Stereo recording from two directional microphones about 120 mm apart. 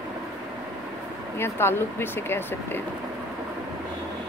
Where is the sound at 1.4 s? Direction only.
20° left (ahead or behind).